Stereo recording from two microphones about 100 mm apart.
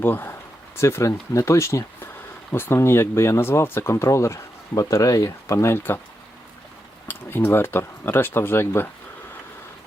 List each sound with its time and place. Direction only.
0.0 s speech: 20° left (ahead or behind)
7.1 s speech: 20° left (ahead or behind)